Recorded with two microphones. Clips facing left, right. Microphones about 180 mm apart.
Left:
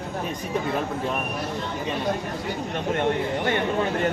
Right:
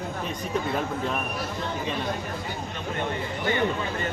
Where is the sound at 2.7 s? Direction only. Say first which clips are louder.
Left 8 dB; 70° left (ahead or behind).